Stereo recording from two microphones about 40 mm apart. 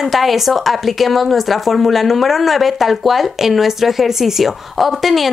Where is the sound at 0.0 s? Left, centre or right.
Centre.